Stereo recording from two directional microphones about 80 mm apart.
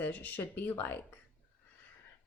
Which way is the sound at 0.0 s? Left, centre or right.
Left.